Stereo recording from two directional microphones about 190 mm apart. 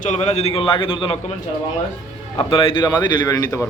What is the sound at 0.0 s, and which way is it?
A man's voice, 35° left (ahead or behind).